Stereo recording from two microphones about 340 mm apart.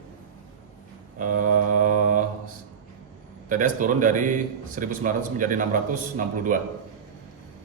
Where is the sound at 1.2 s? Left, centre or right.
Right.